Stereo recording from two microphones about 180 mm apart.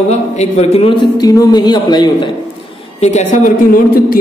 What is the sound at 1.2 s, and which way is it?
A man's voice, 20° left (ahead or behind).